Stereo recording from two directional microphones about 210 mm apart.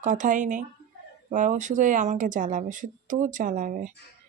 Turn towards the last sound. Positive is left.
turn(degrees=-40)  # may be behind; listen again after turning